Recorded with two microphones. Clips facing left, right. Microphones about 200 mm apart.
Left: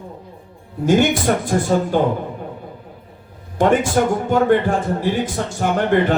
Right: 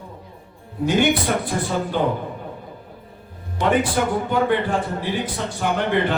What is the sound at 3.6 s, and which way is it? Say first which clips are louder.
A man's voice: left 4 dB; 45° left (ahead or behind).